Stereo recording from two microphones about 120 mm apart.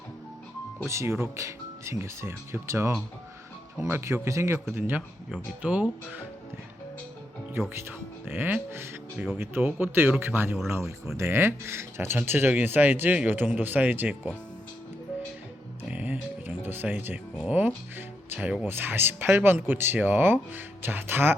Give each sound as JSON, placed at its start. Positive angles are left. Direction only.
{"t": 0.9, "sound": "speech", "side_deg": -20}
{"t": 7.7, "sound": "speech", "side_deg": -20}
{"t": 9.1, "sound": "speech", "side_deg": 0}
{"t": 9.4, "sound": "speech", "side_deg": -15}
{"t": 15.9, "sound": "music", "side_deg": -15}
{"t": 17.9, "sound": "speech", "side_deg": -15}